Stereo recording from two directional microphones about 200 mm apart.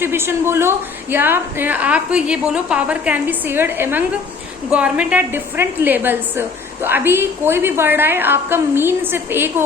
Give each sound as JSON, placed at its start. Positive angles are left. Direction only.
{"t": 0.0, "sound": "a woman's voice", "side_deg": -10}